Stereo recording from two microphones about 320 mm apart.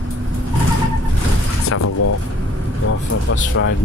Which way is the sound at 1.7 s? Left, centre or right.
Left.